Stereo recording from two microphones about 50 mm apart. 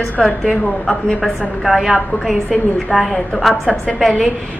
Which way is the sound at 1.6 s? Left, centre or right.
Centre.